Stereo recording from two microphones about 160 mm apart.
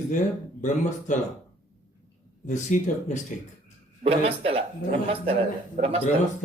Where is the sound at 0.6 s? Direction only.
50° left (ahead or behind).